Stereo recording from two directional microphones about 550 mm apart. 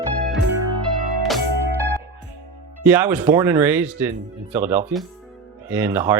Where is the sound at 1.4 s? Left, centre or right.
Right.